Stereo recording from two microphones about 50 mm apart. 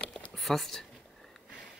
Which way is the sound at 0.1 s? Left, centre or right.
Centre.